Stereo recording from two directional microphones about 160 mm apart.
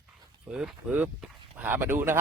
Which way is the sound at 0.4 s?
5° right (ahead or behind).